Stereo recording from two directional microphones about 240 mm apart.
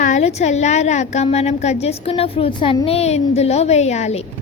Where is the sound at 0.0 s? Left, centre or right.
Left.